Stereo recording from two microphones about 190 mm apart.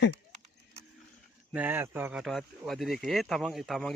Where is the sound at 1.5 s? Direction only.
10° right (ahead or behind).